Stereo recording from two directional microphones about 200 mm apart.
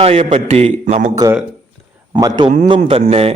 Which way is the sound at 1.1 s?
20° right (ahead or behind).